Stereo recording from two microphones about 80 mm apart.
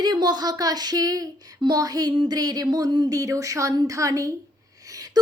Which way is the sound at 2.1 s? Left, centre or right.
Right.